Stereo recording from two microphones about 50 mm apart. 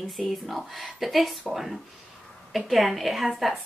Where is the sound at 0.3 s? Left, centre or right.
Centre.